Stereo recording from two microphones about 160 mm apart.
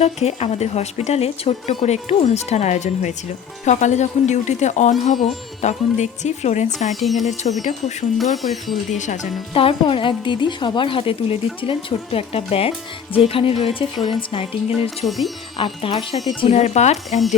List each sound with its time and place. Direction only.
0.0 s speech: 40° left (ahead or behind)
6.9 s speech: centre (ahead or behind)
7.6 s speech: 50° left (ahead or behind)
8.4 s speech: centre (ahead or behind)
8.9 s speech: 50° left (ahead or behind)
9.6 s a woman's voice: 35° left (ahead or behind)
14.7 s speech: centre (ahead or behind)
15.5 s a woman's voice: 30° left (ahead or behind)